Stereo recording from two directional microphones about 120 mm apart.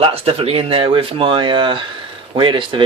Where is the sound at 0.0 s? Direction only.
50° right (ahead or behind).